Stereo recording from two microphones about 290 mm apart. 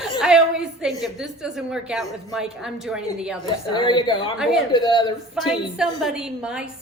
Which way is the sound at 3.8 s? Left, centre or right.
Centre.